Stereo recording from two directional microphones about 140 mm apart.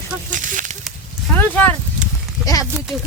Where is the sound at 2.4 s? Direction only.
25° left (ahead or behind).